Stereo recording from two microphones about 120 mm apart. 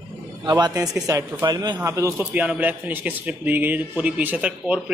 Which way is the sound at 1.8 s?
25° right (ahead or behind).